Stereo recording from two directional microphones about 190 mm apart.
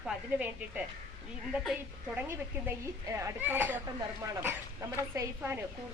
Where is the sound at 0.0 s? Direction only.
5° right (ahead or behind).